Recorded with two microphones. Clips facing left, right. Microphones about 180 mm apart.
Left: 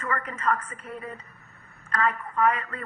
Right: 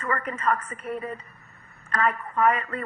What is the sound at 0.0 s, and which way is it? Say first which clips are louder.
Speech: right 2 dB; 30° right (ahead or behind).